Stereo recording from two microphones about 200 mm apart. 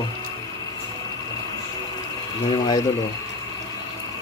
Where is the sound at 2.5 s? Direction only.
20° left (ahead or behind).